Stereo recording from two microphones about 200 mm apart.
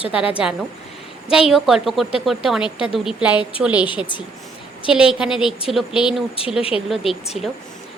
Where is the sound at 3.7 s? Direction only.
25° left (ahead or behind).